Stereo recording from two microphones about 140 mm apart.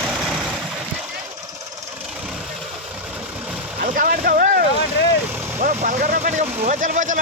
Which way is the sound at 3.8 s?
75° right (ahead or behind).